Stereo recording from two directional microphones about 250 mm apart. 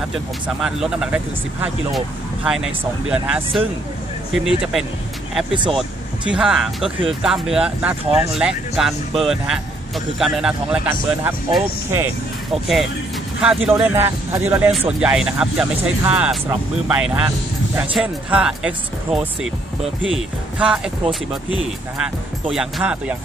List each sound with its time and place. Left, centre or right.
0.1 s speech: centre
6.3 s speech: centre
20.0 s speech: right
20.5 s speech: centre